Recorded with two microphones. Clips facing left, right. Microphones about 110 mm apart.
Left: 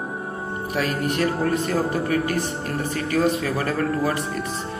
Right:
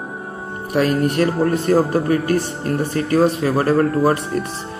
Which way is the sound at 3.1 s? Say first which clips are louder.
Right 6 dB; 30° right (ahead or behind).